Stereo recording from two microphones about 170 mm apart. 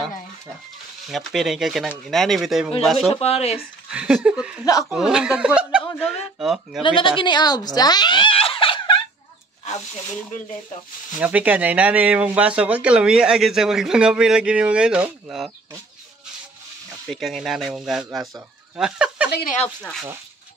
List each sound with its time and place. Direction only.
1.0 s speech: centre (ahead or behind)
3.1 s speech: 35° left (ahead or behind)
3.5 s speech: 5° right (ahead or behind)
6.8 s speech: 30° left (ahead or behind)
11.1 s speech: 10° right (ahead or behind)
17.1 s speech: centre (ahead or behind)